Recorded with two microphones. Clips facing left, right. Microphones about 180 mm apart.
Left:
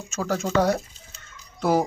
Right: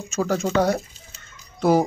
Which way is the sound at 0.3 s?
10° right (ahead or behind).